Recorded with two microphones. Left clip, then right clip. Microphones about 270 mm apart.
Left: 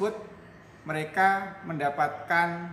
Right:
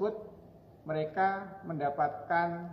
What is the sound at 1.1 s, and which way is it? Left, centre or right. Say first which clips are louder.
A man's voice: left 9 dB; left.